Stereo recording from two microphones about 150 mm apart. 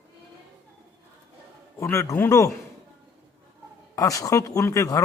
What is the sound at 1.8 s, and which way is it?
Speech, 20° left (ahead or behind).